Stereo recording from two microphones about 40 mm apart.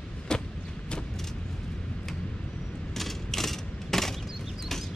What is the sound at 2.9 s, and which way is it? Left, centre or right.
Mechanisms, centre.